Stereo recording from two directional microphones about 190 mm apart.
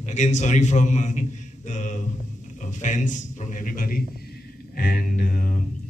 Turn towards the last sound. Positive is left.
turn(degrees=50)  # may be behind; listen again after turning